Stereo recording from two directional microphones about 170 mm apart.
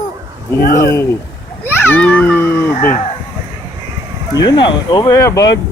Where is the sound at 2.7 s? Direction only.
45° left (ahead or behind).